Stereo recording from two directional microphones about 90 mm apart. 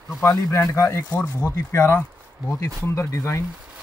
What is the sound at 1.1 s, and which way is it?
Speech, 15° left (ahead or behind).